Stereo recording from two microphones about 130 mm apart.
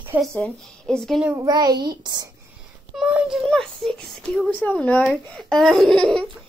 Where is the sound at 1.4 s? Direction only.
30° right (ahead or behind).